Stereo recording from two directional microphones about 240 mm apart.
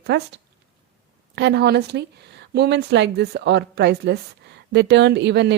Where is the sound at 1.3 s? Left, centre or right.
Right.